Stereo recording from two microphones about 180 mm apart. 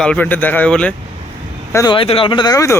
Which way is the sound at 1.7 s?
25° left (ahead or behind).